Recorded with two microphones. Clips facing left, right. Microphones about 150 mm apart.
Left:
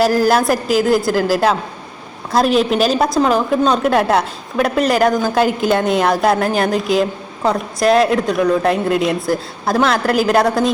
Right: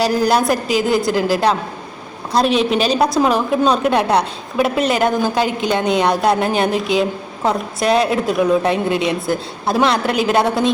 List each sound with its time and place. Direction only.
0.0 s a woman's voice: 5° left (ahead or behind)